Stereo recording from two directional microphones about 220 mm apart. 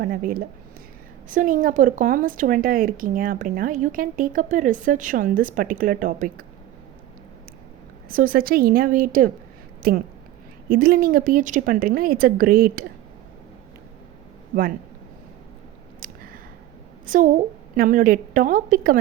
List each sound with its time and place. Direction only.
0.0 s speech: 40° right (ahead or behind)
8.1 s speech: 40° right (ahead or behind)
14.5 s speech: 40° right (ahead or behind)
16.0 s a sound: 40° right (ahead or behind)
17.1 s speech: 35° right (ahead or behind)